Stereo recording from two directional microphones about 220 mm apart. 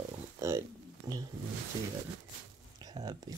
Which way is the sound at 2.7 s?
20° right (ahead or behind).